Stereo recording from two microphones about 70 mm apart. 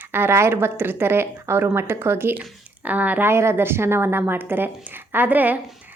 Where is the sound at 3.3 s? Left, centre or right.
Right.